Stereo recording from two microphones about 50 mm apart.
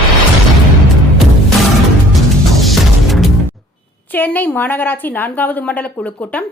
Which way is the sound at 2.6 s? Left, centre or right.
Centre.